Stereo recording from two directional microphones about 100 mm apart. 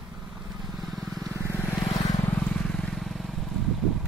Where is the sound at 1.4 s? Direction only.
25° left (ahead or behind).